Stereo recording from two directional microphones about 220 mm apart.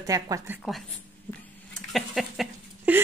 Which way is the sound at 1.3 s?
10° left (ahead or behind).